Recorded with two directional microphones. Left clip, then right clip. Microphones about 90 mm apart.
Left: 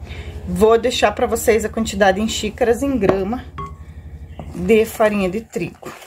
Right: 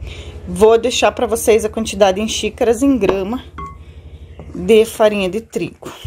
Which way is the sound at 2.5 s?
55° right (ahead or behind).